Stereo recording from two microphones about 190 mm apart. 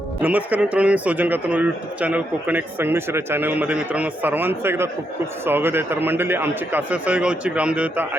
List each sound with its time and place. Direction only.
0.2 s speech: 10° right (ahead or behind)